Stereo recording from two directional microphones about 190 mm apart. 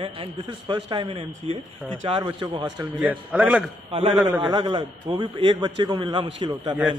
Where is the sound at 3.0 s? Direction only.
5° right (ahead or behind).